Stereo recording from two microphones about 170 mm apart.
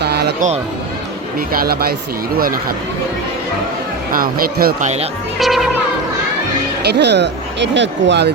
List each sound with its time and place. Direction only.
0.0 s a sound: 70° right (ahead or behind)
0.3 s speech: 45° right (ahead or behind)
1.5 s speech: 65° right (ahead or behind)
4.1 s speech: 55° right (ahead or behind)
5.4 s music: centre (ahead or behind)
6.8 s speech: 80° right